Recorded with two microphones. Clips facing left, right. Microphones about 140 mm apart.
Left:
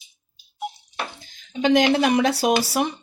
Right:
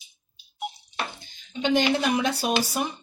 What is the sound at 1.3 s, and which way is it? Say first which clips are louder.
Speech: left 6 dB; 90° left.